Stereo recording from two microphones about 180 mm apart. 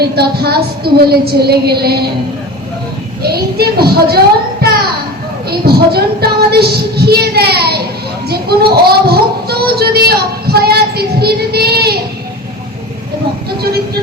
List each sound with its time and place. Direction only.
0.0 s music: 60° right (ahead or behind)
3.2 s music: 60° right (ahead or behind)
5.5 s music: 60° right (ahead or behind)
8.3 s a sound: 60° right (ahead or behind)